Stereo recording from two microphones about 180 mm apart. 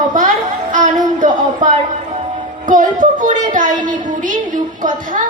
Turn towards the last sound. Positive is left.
turn(degrees=-45)  # may be behind; listen again after turning